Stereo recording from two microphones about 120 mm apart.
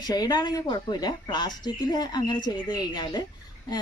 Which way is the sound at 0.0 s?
35° left (ahead or behind).